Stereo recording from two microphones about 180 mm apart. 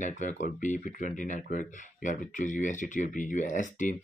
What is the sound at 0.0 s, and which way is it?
Speech, 45° left (ahead or behind).